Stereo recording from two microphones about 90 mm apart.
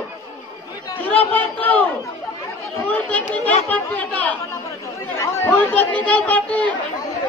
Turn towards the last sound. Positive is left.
turn(degrees=15)  # may be behind; listen again after turning